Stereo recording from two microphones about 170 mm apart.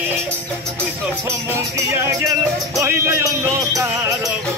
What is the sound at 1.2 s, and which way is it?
Music, 15° right (ahead or behind).